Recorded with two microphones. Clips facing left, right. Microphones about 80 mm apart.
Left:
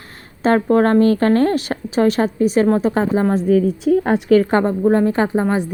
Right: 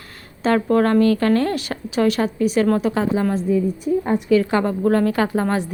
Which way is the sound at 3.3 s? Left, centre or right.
Left.